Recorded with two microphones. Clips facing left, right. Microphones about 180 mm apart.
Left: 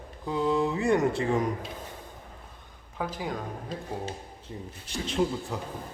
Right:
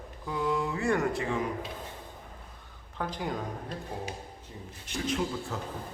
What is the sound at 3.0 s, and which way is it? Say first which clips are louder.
Speech: left 1 dB; 5° left (ahead or behind).